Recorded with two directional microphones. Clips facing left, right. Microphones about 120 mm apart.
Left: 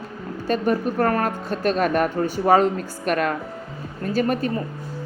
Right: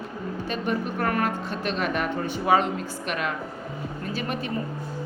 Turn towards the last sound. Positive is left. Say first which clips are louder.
# left 8 dB
turn(degrees=45)  # may be behind; listen again after turning